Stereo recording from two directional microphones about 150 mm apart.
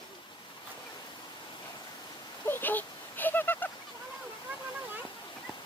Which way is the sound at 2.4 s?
15° left (ahead or behind).